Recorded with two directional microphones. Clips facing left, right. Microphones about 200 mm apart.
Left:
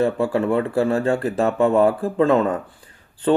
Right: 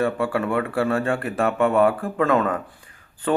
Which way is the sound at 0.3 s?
25° left (ahead or behind).